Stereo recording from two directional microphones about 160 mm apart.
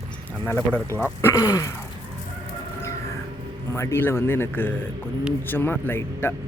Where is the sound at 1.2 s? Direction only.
20° left (ahead or behind).